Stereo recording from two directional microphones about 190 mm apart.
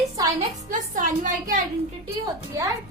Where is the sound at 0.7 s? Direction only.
45° right (ahead or behind).